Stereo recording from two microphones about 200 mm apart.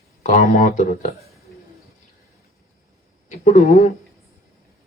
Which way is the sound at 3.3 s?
40° left (ahead or behind).